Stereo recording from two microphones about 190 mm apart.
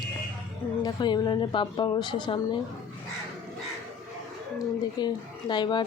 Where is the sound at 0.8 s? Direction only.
20° left (ahead or behind).